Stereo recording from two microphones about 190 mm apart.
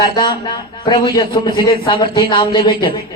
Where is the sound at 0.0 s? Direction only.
20° left (ahead or behind).